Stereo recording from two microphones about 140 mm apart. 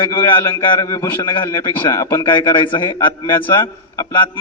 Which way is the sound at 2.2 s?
30° left (ahead or behind).